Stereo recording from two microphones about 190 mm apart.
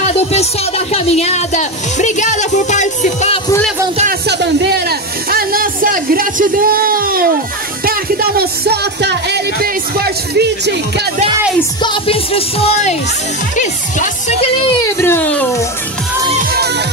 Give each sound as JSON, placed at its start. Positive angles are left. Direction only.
{"t": 0.0, "sound": "speech", "side_deg": 35}
{"t": 4.3, "sound": "speech", "side_deg": -60}
{"t": 11.8, "sound": "speech", "side_deg": 25}
{"t": 15.0, "sound": "speech", "side_deg": 10}